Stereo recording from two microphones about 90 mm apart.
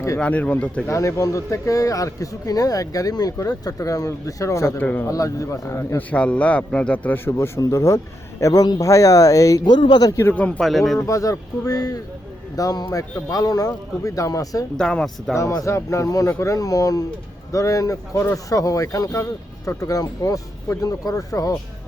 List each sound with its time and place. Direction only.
0.2 s a man's voice: 15° left (ahead or behind)
0.9 s a man's voice: 35° left (ahead or behind)
4.8 s speech: 20° left (ahead or behind)
5.0 s a man's voice: 40° left (ahead or behind)
6.0 s a man's voice: 15° left (ahead or behind)
7.3 s a man's voice: 30° left (ahead or behind)
9.6 s a man's voice: 60° left (ahead or behind)
10.1 s a man's voice: 30° left (ahead or behind)
10.6 s speech: centre (ahead or behind)
11.0 s a man's voice: 40° left (ahead or behind)
14.8 s a man's voice: 5° left (ahead or behind)
15.4 s a man's voice: 35° left (ahead or behind)